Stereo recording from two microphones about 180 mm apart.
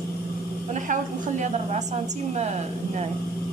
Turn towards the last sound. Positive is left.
turn(degrees=-40)  # may be behind; listen again after turning